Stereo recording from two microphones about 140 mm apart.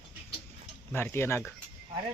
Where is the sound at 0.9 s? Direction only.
15° left (ahead or behind).